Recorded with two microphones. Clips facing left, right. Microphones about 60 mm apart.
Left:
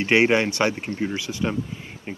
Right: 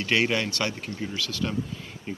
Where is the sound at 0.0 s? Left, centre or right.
Left.